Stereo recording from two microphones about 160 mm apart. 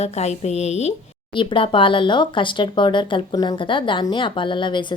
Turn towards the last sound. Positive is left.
turn(degrees=30)  # may be behind; listen again after turning